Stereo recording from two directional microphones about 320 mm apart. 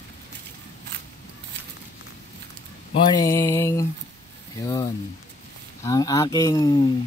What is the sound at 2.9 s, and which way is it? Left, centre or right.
Speech, centre.